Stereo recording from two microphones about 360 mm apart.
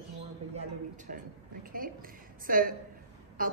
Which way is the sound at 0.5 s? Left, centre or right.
Right.